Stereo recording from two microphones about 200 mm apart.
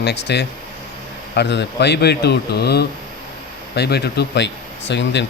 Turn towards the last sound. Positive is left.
turn(degrees=60)  # may be behind; listen again after turning